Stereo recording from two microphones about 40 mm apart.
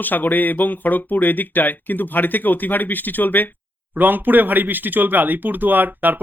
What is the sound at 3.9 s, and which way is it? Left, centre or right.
Speech, right.